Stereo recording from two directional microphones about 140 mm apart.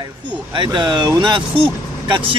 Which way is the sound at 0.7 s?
30° right (ahead or behind).